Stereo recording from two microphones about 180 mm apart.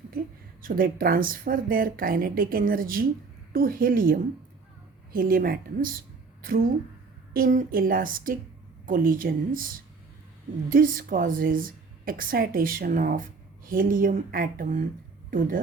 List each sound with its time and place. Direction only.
0.6 s a woman's voice: 50° right (ahead or behind)
7.3 s a woman's voice: 45° right (ahead or behind)
10.7 s a woman's voice: 50° right (ahead or behind)